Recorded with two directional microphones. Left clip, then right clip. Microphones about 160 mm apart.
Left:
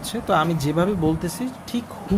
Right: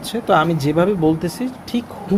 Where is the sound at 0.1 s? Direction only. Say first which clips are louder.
Right 5 dB; 5° right (ahead or behind).